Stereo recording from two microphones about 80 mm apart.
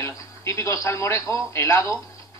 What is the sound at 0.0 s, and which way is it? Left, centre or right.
A man's voice, left.